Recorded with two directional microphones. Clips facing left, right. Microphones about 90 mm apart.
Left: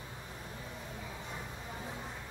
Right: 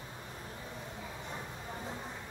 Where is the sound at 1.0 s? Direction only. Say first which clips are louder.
Right 1 dB; 15° right (ahead or behind).